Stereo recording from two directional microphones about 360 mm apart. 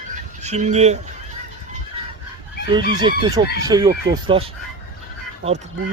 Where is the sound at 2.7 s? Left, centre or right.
Centre.